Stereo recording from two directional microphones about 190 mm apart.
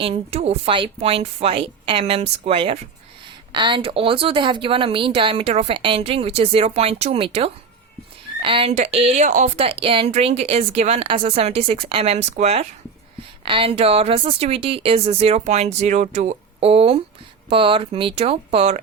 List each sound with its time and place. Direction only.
0.0 s speech: 35° right (ahead or behind)